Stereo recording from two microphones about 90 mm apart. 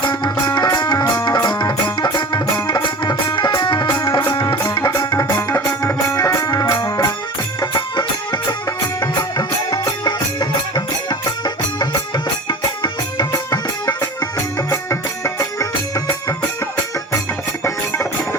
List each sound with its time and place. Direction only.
0.0 s music: 55° left (ahead or behind)
4.4 s music: 25° left (ahead or behind)
4.9 s music: 45° left (ahead or behind)
7.6 s music: 60° left (ahead or behind)
9.1 s music: 50° left (ahead or behind)
13.3 s music: 45° left (ahead or behind)
14.3 s music: 30° left (ahead or behind)
17.6 s music: 25° left (ahead or behind)